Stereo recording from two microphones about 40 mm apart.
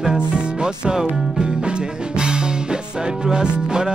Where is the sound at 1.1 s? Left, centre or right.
Centre.